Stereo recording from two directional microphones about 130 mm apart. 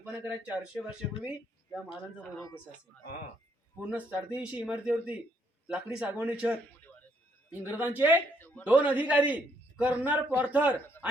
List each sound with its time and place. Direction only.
0.0 s a man's voice: 15° right (ahead or behind)
3.8 s a man's voice: 10° right (ahead or behind)
7.6 s a man's voice: 15° right (ahead or behind)
8.4 s a sound: 15° left (ahead or behind)
8.6 s a man's voice: 10° right (ahead or behind)